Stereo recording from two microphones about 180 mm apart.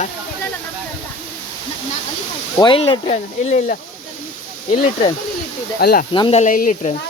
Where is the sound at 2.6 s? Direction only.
25° left (ahead or behind).